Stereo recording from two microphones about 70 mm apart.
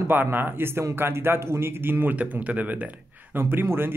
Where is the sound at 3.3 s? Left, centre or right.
Right.